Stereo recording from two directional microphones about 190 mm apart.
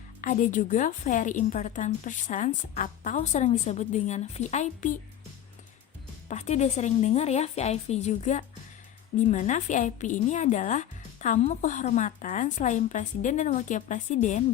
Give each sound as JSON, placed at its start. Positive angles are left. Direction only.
{"t": 0.2, "sound": "a woman's voice", "side_deg": 45}
{"t": 6.2, "sound": "a woman's voice", "side_deg": 35}